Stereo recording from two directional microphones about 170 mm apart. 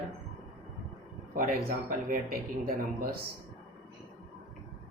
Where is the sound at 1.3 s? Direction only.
55° right (ahead or behind).